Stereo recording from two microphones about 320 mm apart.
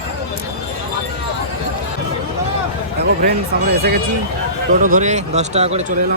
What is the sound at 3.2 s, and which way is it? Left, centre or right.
Speech, right.